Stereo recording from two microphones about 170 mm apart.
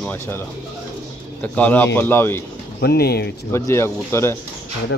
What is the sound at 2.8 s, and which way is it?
Speech, 70° left (ahead or behind).